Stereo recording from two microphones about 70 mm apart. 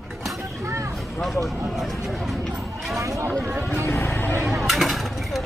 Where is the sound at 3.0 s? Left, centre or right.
Right.